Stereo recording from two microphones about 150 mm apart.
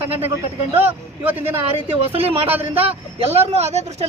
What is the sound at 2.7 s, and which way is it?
Speech, 40° right (ahead or behind).